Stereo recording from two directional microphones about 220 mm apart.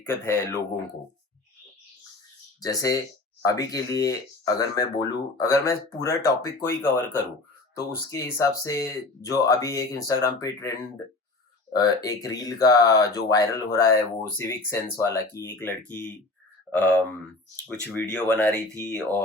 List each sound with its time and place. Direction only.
0.0 s speech: 10° left (ahead or behind)
2.6 s speech: 15° left (ahead or behind)
11.7 s speech: 15° left (ahead or behind)
18.1 s speech: 5° left (ahead or behind)